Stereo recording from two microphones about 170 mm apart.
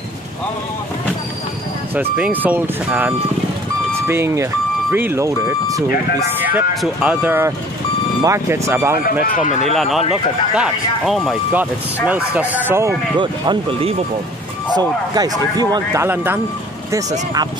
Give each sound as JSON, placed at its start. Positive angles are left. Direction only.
{"t": 2.3, "sound": "speech", "side_deg": -10}
{"t": 6.8, "sound": "speech", "side_deg": -10}
{"t": 9.2, "sound": "speech", "side_deg": 50}
{"t": 9.8, "sound": "speech", "side_deg": 0}
{"t": 13.2, "sound": "speech", "side_deg": -30}
{"t": 14.8, "sound": "speech", "side_deg": -20}